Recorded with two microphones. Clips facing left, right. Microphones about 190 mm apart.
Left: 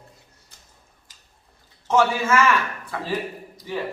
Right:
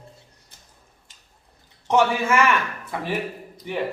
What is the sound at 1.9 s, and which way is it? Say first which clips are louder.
A man's voice: even; 15° right (ahead or behind).